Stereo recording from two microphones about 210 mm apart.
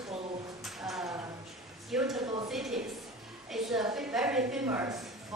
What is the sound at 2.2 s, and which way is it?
Speech, 20° right (ahead or behind).